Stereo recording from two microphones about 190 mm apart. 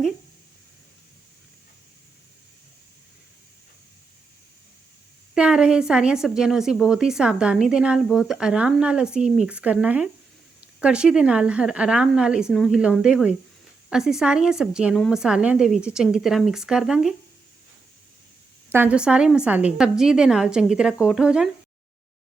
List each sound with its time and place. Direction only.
5.3 s a woman's voice: 5° right (ahead or behind)
18.7 s a woman's voice: 10° right (ahead or behind)